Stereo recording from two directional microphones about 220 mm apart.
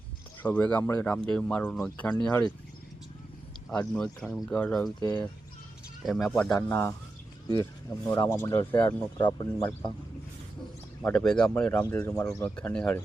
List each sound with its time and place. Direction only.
0.4 s speech: 5° left (ahead or behind)
3.7 s speech: 5° left (ahead or behind)
4.9 s speech: 20° left (ahead or behind)
6.0 s speech: centre (ahead or behind)
8.0 s speech: 15° left (ahead or behind)
11.0 s speech: 5° left (ahead or behind)